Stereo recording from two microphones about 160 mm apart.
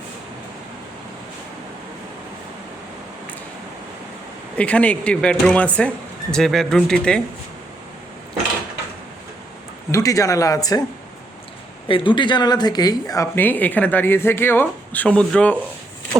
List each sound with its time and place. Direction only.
4.5 s speech: 10° left (ahead or behind)
9.9 s speech: 20° left (ahead or behind)
11.9 s speech: 30° left (ahead or behind); by 15.5 s 5° left (ahead or behind)